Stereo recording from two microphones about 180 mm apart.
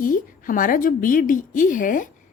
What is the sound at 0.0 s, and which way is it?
Speech, 50° left (ahead or behind).